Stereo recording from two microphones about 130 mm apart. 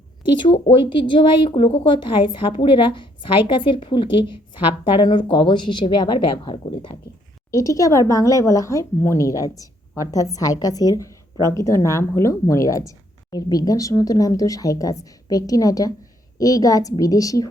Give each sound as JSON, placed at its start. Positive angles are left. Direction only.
{"t": 0.3, "sound": "speech", "side_deg": 40}
{"t": 7.5, "sound": "speech", "side_deg": 25}